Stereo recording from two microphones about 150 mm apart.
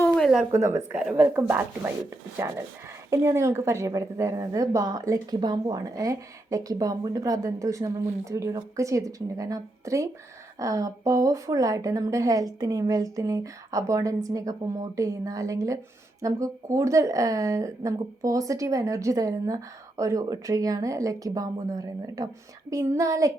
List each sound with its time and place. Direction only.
0.2 s a sound: 5° right (ahead or behind)
0.5 s a woman's voice: 20° right (ahead or behind)
0.9 s a woman's voice: 10° right (ahead or behind)